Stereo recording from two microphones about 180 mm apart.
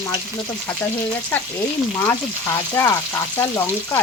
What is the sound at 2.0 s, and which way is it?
Speech, 15° left (ahead or behind).